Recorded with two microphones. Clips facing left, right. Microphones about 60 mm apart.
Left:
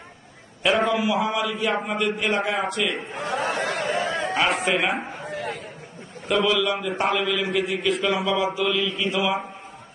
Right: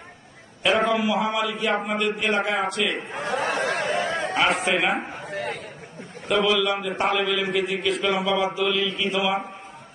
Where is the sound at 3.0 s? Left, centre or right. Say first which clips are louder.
Even; right.